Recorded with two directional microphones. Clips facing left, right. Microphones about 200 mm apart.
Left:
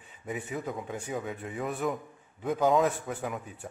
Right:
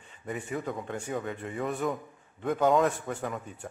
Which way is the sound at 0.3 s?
5° left (ahead or behind).